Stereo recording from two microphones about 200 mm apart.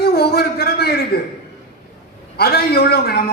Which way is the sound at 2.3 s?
50° left (ahead or behind).